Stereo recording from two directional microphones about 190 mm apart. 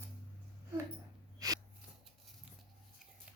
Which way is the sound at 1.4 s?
20° right (ahead or behind).